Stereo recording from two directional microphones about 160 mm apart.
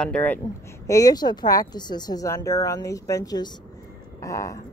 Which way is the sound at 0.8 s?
20° left (ahead or behind).